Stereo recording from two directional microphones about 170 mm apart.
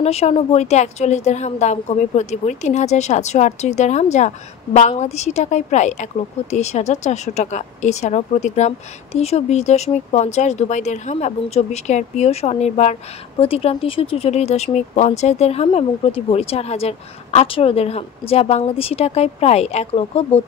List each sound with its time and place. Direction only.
0.0 s a woman's voice: 35° left (ahead or behind)